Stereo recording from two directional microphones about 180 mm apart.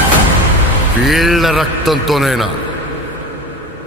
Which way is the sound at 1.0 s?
Centre (ahead or behind).